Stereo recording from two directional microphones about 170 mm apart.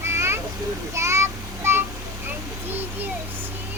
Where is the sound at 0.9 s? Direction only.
15° right (ahead or behind).